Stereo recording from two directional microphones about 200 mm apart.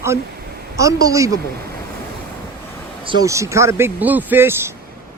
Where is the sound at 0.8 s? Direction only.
15° right (ahead or behind).